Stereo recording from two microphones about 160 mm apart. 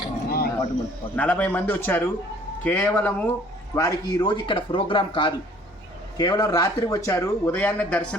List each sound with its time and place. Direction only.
0.3 s a sound: 75° left (ahead or behind)
1.1 s a man's voice: 10° left (ahead or behind)
3.8 s speech: 25° left (ahead or behind); by 8.0 s 10° left (ahead or behind)